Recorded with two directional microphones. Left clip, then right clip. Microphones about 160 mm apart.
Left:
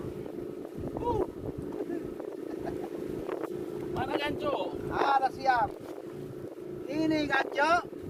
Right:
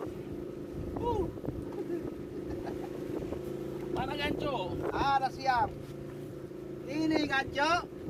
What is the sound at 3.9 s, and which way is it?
Speech, 5° left (ahead or behind).